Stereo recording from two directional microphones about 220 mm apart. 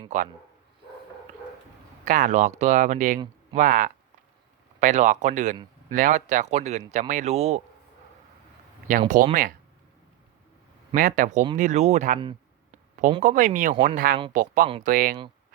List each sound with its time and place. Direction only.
0.1 s speech: 30° right (ahead or behind)
2.0 s speech: 35° right (ahead or behind)
8.9 s speech: 35° right (ahead or behind)
10.9 s speech: 35° right (ahead or behind)
12.7 s a sound: 35° right (ahead or behind)
13.2 s speech: 35° right (ahead or behind)